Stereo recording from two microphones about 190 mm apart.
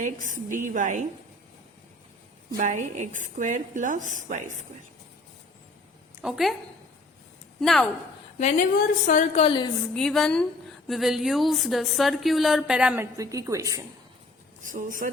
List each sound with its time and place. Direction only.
0.0 s a woman's voice: 45° right (ahead or behind)
2.6 s a woman's voice: 40° right (ahead or behind)
6.2 s speech: centre (ahead or behind)
7.6 s speech: centre (ahead or behind)
8.4 s a woman's voice: 40° left (ahead or behind); by 9.7 s 25° left (ahead or behind)
9.9 s speech: 5° left (ahead or behind)
13.1 s a woman's voice: 15° right (ahead or behind)
14.6 s a woman's voice: 45° right (ahead or behind)